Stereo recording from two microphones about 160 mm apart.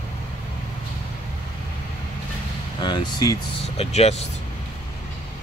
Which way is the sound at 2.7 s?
25° left (ahead or behind).